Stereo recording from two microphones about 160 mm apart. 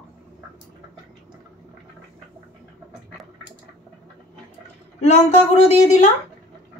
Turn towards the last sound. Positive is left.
turn(degrees=45)  # may be behind; listen again after turning